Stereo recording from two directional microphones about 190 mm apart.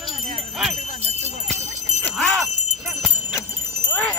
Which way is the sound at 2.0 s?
5° left (ahead or behind).